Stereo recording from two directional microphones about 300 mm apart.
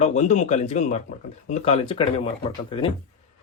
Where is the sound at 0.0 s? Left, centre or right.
Left.